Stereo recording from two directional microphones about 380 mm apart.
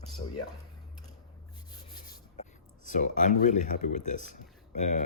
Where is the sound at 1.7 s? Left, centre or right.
Centre.